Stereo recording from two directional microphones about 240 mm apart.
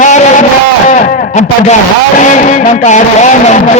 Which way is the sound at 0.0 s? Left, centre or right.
Left.